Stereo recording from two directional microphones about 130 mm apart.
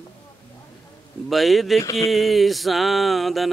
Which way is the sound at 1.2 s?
Centre (ahead or behind).